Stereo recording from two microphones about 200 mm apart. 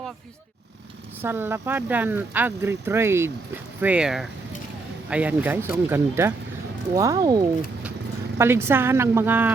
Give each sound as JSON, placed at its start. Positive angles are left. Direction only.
{"t": 1.2, "sound": "speech", "side_deg": -10}